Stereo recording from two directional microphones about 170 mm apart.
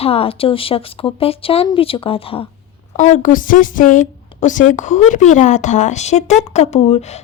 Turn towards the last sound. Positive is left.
turn(degrees=40)  # may be behind; listen again after turning